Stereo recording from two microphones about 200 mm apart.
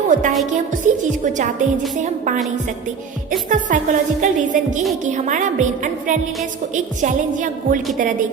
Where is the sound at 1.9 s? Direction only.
40° right (ahead or behind).